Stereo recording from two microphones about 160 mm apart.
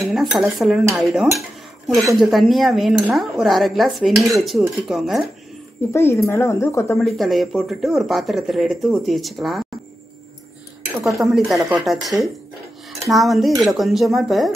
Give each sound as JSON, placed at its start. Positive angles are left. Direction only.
{"t": 0.0, "sound": "speech", "side_deg": 0}
{"t": 5.9, "sound": "speech", "side_deg": 15}
{"t": 7.0, "sound": "speech", "side_deg": 0}
{"t": 11.1, "sound": "speech", "side_deg": 0}